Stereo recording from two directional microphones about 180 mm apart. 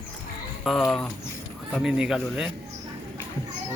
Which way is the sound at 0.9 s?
5° left (ahead or behind).